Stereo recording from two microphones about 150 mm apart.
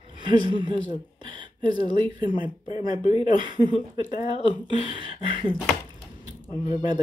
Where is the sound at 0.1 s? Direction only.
30° right (ahead or behind).